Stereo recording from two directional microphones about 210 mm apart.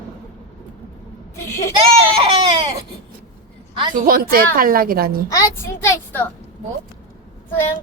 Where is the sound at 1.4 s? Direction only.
15° left (ahead or behind).